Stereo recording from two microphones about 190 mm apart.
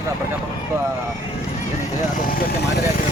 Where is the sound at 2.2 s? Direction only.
50° left (ahead or behind).